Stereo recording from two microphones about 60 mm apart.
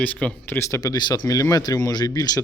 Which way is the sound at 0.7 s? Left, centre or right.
Left.